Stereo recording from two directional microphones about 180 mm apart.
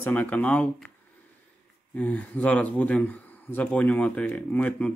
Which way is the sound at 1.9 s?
10° left (ahead or behind).